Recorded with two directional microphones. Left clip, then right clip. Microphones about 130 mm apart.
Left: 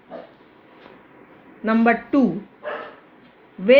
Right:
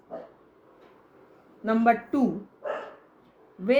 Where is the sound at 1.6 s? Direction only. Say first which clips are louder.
Left 4 dB; 65° left (ahead or behind).